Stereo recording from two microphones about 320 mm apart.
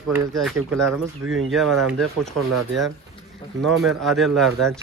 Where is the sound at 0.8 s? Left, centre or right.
Right.